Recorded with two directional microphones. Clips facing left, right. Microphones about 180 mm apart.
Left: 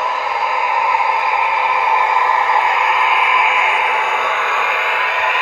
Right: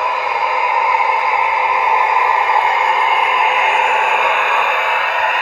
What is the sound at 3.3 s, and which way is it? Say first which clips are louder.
Radio: right 2 dB; 40° right (ahead or behind).